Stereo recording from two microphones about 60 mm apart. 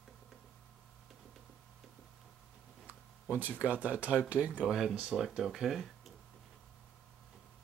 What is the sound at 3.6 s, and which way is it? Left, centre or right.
Speech, right.